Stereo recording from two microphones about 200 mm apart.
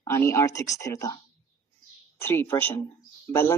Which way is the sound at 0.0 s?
15° left (ahead or behind).